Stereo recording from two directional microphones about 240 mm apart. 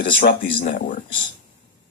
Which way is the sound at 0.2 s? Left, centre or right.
Left.